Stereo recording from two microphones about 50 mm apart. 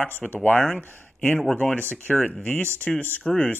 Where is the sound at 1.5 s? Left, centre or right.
Left.